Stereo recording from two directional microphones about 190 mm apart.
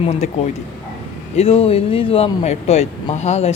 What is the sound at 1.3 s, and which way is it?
Speech, 30° left (ahead or behind).